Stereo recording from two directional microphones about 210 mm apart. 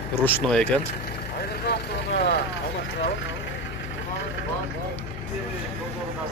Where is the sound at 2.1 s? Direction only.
55° left (ahead or behind).